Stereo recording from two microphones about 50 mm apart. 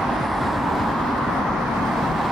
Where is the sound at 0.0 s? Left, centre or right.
Centre.